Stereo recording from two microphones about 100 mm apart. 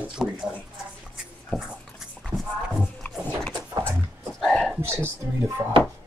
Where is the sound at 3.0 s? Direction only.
20° left (ahead or behind).